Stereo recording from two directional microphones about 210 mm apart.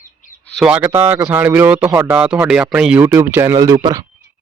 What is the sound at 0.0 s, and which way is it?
Bird, 40° left (ahead or behind).